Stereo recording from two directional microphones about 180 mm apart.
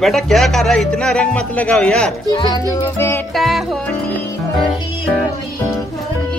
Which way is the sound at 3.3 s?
Centre (ahead or behind).